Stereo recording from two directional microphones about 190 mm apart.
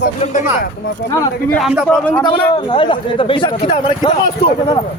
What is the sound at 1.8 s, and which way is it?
Speech, 5° left (ahead or behind).